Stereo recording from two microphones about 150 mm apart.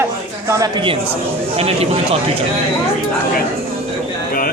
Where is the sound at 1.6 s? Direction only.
40° right (ahead or behind).